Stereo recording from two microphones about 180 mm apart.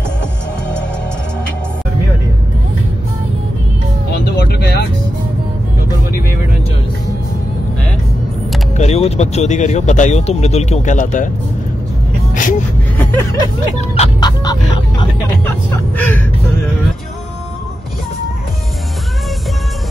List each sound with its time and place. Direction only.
4.5 s vehicle: 60° left (ahead or behind)
8.7 s speech: 35° left (ahead or behind)
12.4 s vehicle: 45° left (ahead or behind)
12.9 s hubbub: 10° left (ahead or behind)
13.7 s speech: 35° left (ahead or behind)
14.2 s music: 25° left (ahead or behind)
15.4 s speech: 10° left (ahead or behind)